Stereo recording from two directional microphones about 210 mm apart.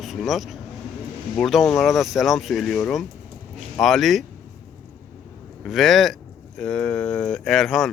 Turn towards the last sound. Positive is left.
turn(degrees=0)  # may be behind; listen again after turning